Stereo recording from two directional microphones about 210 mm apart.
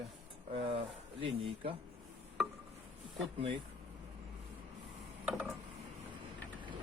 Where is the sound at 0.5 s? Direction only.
25° right (ahead or behind).